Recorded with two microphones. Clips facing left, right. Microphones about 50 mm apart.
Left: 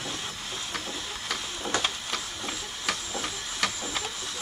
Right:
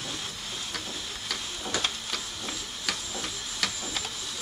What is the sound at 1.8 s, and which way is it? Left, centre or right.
Printer, centre.